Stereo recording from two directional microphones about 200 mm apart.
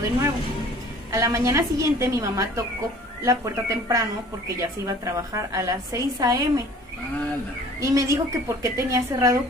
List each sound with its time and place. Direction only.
1.1 s a woman's voice: 15° right (ahead or behind)
7.8 s a woman's voice: 15° right (ahead or behind)